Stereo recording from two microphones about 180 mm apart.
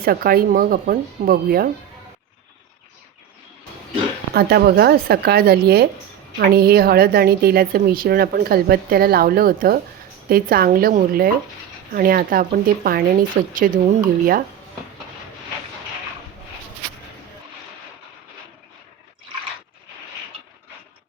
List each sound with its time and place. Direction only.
0.0 s speech: 55° right (ahead or behind)
4.4 s speech: 60° right (ahead or behind)